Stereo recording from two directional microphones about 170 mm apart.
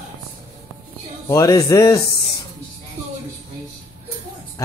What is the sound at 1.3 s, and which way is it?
Speech, 20° left (ahead or behind).